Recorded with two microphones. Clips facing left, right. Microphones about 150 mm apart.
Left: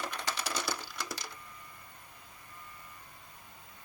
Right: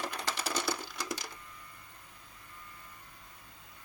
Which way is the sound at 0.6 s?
20° right (ahead or behind).